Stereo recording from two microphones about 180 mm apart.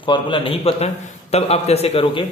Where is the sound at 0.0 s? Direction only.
25° left (ahead or behind).